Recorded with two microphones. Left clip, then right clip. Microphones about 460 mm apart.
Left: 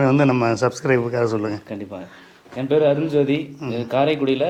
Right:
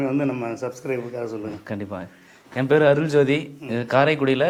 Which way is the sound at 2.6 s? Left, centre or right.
Right.